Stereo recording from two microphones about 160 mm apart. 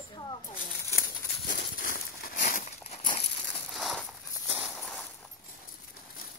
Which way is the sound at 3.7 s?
Centre (ahead or behind).